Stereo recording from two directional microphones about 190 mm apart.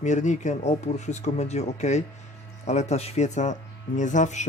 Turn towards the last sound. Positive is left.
turn(degrees=40)  # may be behind; listen again after turning